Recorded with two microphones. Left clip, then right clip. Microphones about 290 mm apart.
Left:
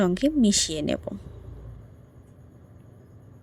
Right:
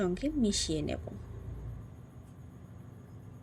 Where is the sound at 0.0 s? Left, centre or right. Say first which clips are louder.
Left 9 dB; left.